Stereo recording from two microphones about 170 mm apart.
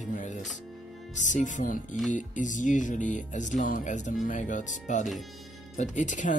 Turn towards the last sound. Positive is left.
turn(degrees=45)  # may be behind; listen again after turning